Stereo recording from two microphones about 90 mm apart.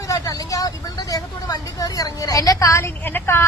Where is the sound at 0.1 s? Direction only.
40° left (ahead or behind).